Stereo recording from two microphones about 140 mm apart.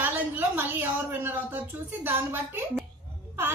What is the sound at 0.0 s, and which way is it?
A woman's voice, 15° right (ahead or behind).